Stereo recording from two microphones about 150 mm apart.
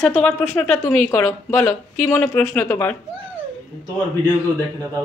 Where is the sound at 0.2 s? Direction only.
10° left (ahead or behind).